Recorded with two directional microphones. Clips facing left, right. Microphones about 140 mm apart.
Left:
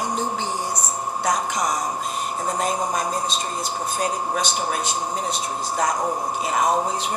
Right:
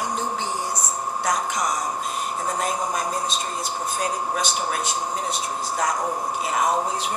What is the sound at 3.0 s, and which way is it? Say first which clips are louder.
Speech: left 1 dB; 20° left (ahead or behind).